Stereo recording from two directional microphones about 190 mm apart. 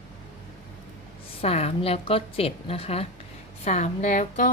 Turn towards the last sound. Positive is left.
turn(degrees=45)  # may be behind; listen again after turning